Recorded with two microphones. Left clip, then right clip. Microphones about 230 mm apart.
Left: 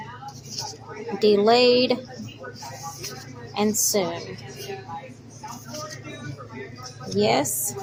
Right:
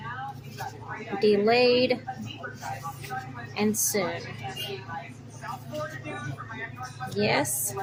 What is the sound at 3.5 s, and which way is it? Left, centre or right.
Speech, centre.